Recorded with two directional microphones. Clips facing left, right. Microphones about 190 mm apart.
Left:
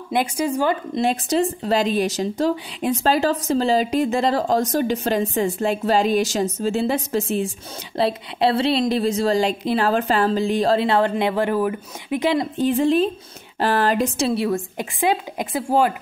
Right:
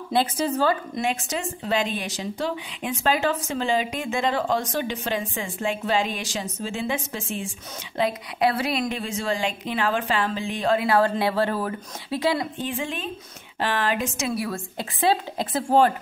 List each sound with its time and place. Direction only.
0.1 s speech: 15° left (ahead or behind)
0.9 s speech: 35° left (ahead or behind)
12.6 s a woman's voice: 35° left (ahead or behind); by 15.9 s 10° left (ahead or behind)